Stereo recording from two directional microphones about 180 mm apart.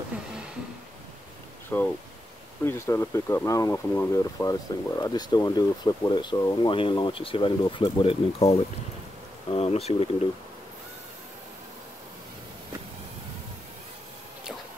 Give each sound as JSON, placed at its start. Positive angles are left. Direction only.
{"t": 1.7, "sound": "speech", "side_deg": 10}